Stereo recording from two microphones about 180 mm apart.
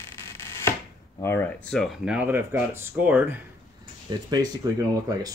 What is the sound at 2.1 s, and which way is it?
Speech, 10° right (ahead or behind).